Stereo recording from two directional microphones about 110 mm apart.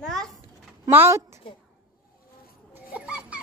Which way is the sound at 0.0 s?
5° left (ahead or behind).